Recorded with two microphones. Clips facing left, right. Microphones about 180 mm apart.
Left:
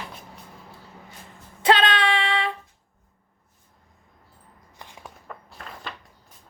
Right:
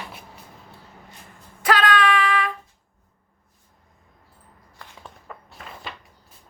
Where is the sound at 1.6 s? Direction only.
25° left (ahead or behind).